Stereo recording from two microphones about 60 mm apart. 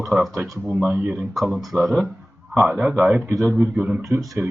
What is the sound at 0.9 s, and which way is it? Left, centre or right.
Speech, right.